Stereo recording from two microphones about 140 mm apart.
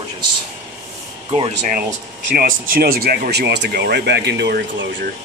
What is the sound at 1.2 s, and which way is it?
Speech, 45° right (ahead or behind).